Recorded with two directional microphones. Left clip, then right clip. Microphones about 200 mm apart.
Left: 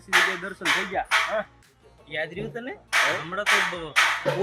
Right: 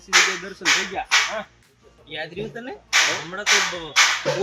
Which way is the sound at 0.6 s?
5° left (ahead or behind).